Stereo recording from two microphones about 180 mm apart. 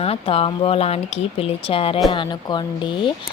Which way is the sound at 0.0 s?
35° left (ahead or behind).